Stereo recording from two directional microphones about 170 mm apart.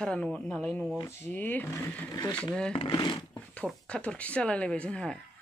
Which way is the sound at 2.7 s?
30° left (ahead or behind).